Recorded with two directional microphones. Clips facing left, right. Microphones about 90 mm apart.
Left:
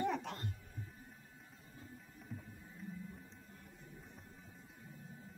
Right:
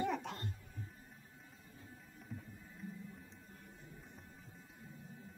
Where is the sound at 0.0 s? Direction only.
Centre (ahead or behind).